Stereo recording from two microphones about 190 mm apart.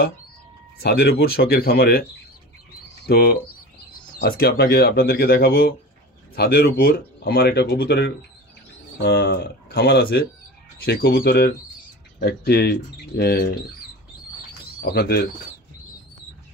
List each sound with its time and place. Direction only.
0.7 s speech: 55° left (ahead or behind)
3.1 s speech: 55° left (ahead or behind)
14.8 s speech: 55° left (ahead or behind)